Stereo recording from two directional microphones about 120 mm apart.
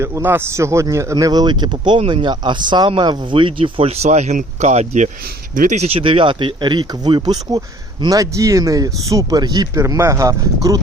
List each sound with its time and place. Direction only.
0.0 s speech: 20° right (ahead or behind); by 2.0 s 40° right (ahead or behind)
2.0 s speech: 55° right (ahead or behind)
2.2 s speech: 40° right (ahead or behind)